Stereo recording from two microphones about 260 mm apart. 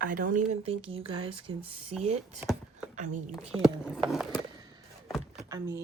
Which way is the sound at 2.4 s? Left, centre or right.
Centre.